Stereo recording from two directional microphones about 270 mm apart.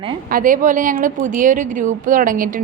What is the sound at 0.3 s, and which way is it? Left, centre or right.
A woman's voice, right.